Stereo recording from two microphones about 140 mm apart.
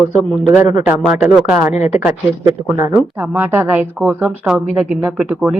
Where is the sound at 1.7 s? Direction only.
50° left (ahead or behind).